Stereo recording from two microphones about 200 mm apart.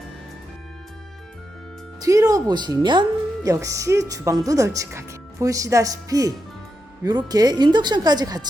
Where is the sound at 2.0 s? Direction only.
15° right (ahead or behind).